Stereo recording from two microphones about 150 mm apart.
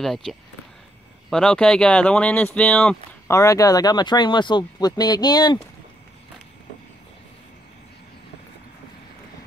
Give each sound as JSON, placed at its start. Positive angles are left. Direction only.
{"t": 0.0, "sound": "speech", "side_deg": 0}
{"t": 3.3, "sound": "speech", "side_deg": 20}